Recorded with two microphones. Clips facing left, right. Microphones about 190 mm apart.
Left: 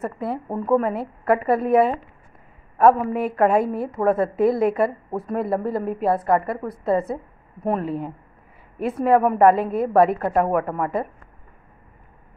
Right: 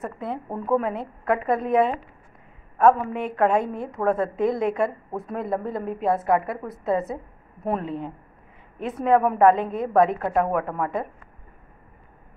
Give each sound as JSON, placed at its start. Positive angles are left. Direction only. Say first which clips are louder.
{"t": 0.0, "sound": "a woman's voice", "louder": "left 4 dB", "side_deg": 5}
{"t": 3.1, "sound": "a woman's voice", "louder": "left 3 dB", "side_deg": 5}